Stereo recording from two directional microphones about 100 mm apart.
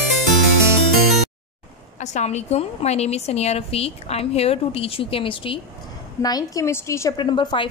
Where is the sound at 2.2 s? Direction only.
90° left; by 5.6 s 60° left (ahead or behind).